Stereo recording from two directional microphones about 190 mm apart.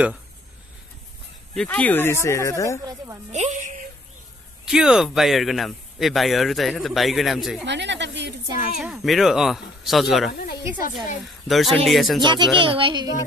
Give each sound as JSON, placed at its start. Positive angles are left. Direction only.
{"t": 1.5, "sound": "speech", "side_deg": 5}
{"t": 2.8, "sound": "a child's voice", "side_deg": -20}
{"t": 3.3, "sound": "a woman's voice", "side_deg": -35}
{"t": 4.6, "sound": "speech", "side_deg": -5}
{"t": 7.6, "sound": "speech", "side_deg": -70}
{"t": 8.7, "sound": "speech", "side_deg": 0}
{"t": 11.4, "sound": "speech", "side_deg": 0}
{"t": 12.2, "sound": "a child's voice", "side_deg": -25}